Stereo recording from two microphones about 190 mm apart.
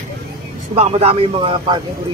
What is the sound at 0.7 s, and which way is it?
Speech, 35° right (ahead or behind).